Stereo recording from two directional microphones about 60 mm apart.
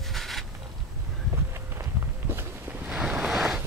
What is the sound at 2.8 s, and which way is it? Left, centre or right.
Waves, right.